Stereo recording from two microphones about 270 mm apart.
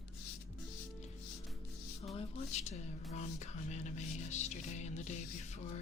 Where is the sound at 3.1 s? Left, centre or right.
Left.